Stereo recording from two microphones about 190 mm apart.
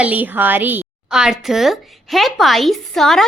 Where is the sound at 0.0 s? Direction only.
10° right (ahead or behind).